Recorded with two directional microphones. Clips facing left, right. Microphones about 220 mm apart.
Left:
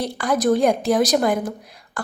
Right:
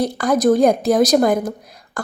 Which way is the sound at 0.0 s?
45° right (ahead or behind).